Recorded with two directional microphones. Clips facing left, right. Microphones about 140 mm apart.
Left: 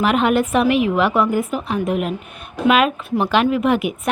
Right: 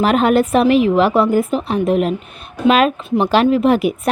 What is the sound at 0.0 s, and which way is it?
Speech, 35° right (ahead or behind).